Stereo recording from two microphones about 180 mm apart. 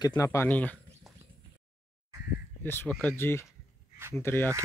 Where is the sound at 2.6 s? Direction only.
10° left (ahead or behind).